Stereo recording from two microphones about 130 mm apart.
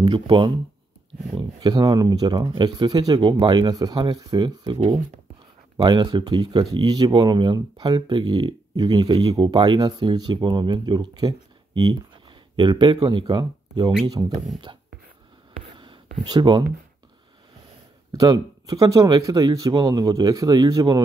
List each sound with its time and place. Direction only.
0.0 s speech: 35° right (ahead or behind)
4.7 s speech: 55° right (ahead or behind)
5.8 s speech: 35° right (ahead or behind)
16.3 s speech: 35° right (ahead or behind)
18.1 s speech: 30° right (ahead or behind)